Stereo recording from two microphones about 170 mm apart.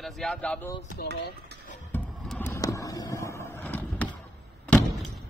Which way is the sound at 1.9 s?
10° left (ahead or behind).